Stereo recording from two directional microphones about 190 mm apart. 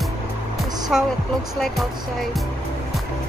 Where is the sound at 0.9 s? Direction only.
Centre (ahead or behind).